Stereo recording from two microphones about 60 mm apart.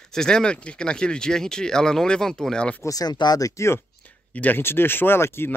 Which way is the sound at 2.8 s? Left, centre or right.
Left.